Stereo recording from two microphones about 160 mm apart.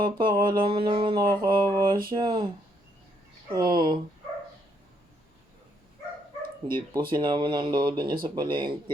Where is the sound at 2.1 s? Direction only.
25° right (ahead or behind).